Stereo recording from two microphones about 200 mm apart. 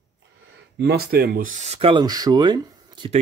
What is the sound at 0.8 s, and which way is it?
Speech, 55° right (ahead or behind).